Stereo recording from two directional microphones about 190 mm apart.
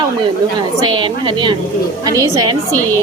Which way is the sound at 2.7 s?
10° left (ahead or behind).